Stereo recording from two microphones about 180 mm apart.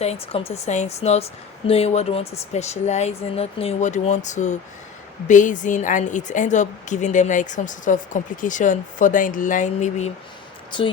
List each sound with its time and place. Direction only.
0.0 s a woman's voice: 35° left (ahead or behind)
10.7 s speech: 25° left (ahead or behind)